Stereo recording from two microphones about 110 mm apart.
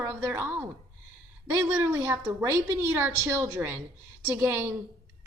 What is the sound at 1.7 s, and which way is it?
A woman's voice, 20° right (ahead or behind).